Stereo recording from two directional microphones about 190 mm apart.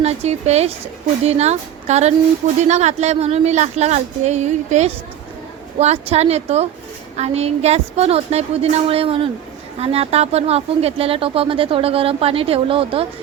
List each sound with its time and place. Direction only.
0.0 s speech: 35° right (ahead or behind)